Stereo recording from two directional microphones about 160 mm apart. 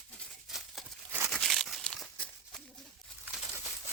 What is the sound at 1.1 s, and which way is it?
Crumpling, 15° right (ahead or behind).